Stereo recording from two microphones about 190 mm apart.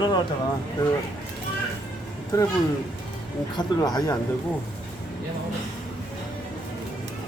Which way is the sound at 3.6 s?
20° left (ahead or behind).